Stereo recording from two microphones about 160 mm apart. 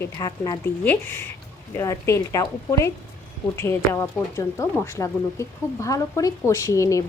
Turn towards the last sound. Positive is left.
turn(degrees=20)  # may be behind; listen again after turning